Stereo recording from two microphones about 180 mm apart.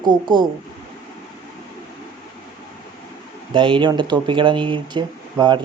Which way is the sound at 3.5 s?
30° right (ahead or behind).